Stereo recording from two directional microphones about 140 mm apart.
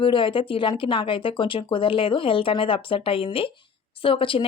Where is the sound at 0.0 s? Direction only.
35° left (ahead or behind).